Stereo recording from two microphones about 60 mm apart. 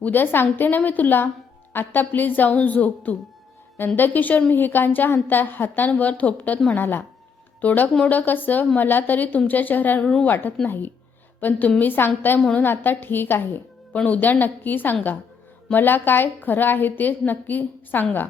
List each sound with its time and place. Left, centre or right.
0.0 s a woman's voice: left
10.0 s a woman's voice: centre
10.2 s a woman's voice: left
13.9 s a woman's voice: left